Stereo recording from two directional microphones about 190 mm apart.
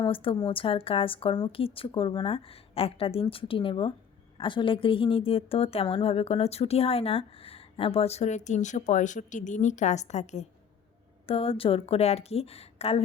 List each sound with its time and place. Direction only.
0.0 s a woman's voice: 30° left (ahead or behind)